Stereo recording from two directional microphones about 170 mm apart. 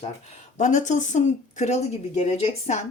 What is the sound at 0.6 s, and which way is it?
A woman's voice, 45° left (ahead or behind).